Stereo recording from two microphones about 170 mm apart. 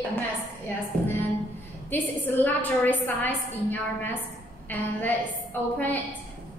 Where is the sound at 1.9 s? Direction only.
10° left (ahead or behind).